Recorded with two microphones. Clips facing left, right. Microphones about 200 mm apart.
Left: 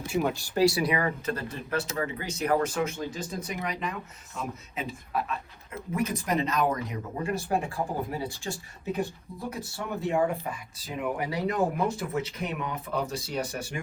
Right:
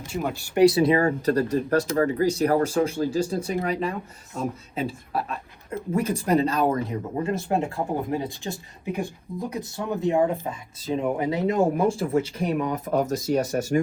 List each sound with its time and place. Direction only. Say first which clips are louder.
0.1 s speech: left 1 dB; 5° left (ahead or behind)
0.4 s speech: right 10 dB; 15° right (ahead or behind); by 13.8 s 45° right (ahead or behind)